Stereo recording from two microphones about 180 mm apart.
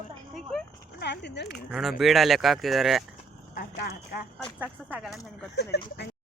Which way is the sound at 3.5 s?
60° left (ahead or behind).